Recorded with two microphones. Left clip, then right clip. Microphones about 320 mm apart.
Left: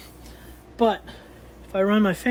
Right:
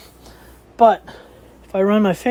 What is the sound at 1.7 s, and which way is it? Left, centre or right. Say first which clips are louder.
Speech: right 5 dB; centre.